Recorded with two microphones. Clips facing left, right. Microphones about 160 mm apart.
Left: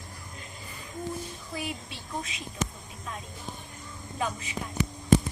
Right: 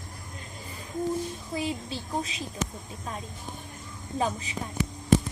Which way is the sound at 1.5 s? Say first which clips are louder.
Right 5 dB; 30° right (ahead or behind).